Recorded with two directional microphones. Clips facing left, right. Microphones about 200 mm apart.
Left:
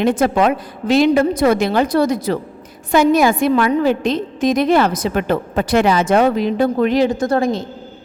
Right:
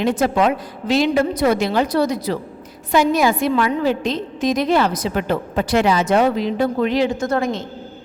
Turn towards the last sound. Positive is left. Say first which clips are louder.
# left 3 dB
turn(degrees=35)  # may be behind; listen again after turning